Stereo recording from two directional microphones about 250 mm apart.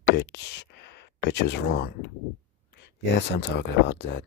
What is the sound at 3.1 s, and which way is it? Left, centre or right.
Speech, left.